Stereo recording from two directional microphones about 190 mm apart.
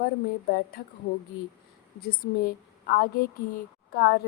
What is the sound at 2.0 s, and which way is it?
A woman's voice, 55° left (ahead or behind).